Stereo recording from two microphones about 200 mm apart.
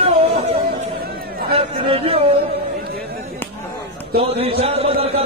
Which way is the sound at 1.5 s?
30° right (ahead or behind).